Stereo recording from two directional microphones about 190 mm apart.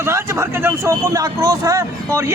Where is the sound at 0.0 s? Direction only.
15° right (ahead or behind).